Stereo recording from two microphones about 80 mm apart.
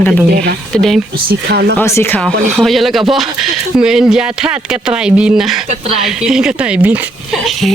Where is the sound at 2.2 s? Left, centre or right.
Centre.